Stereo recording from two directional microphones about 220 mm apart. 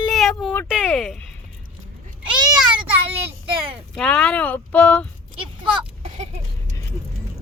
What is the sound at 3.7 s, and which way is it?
Speech, centre (ahead or behind).